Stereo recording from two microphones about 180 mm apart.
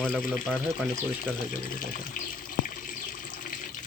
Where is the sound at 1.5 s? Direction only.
50° left (ahead or behind).